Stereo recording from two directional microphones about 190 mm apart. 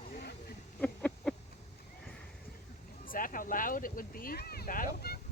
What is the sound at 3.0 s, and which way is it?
Speech, 45° left (ahead or behind).